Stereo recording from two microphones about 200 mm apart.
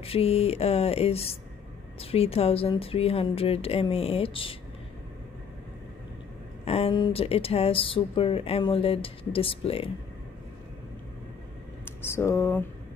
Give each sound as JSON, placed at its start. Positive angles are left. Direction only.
{"t": 0.0, "sound": "speech", "side_deg": 30}
{"t": 6.6, "sound": "speech", "side_deg": 30}
{"t": 11.8, "sound": "speech", "side_deg": 10}